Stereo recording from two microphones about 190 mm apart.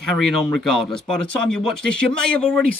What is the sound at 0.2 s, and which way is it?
Speech, centre (ahead or behind).